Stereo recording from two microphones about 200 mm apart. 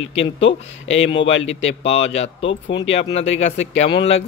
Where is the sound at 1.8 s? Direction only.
30° left (ahead or behind).